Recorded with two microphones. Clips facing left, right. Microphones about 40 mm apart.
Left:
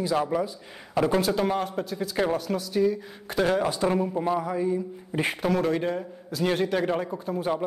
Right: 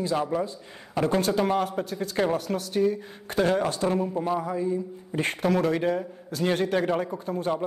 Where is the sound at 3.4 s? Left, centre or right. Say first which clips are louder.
Even; centre.